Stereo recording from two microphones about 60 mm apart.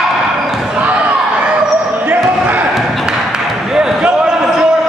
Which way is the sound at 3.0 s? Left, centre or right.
Centre.